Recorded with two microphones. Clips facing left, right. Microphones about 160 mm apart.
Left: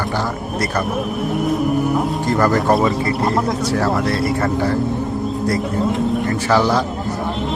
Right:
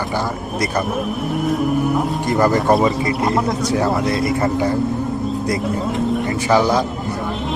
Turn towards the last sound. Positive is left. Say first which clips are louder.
# right 1 dB
turn(degrees=-15)  # may be behind; listen again after turning